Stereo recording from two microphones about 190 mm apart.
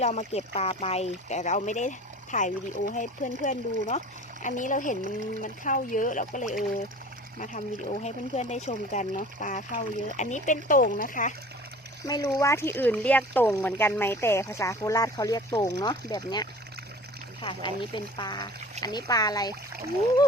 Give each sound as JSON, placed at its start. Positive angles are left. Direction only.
{"t": 0.0, "sound": "speech", "side_deg": 35}
{"t": 12.0, "sound": "speech", "side_deg": 20}